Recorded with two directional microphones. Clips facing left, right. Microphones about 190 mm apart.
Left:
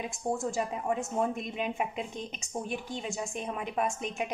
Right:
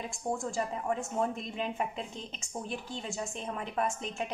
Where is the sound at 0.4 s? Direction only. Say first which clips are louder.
Left 2 dB; 20° left (ahead or behind).